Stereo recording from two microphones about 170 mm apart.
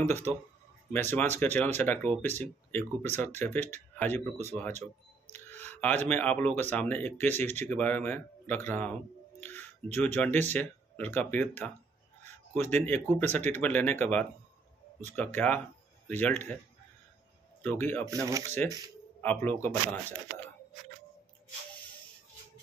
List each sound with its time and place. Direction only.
0.0 s speech: 15° left (ahead or behind)
9.4 s a sound: 10° left (ahead or behind)
10.1 s speech: 10° left (ahead or behind)
17.6 s speech: 10° left (ahead or behind)
18.0 s speech: 20° right (ahead or behind)
18.6 s speech: 10° left (ahead or behind)